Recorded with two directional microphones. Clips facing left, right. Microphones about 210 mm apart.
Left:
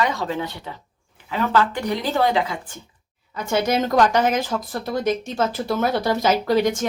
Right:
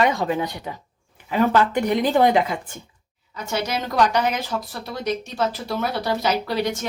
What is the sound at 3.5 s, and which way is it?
Speech, 50° left (ahead or behind).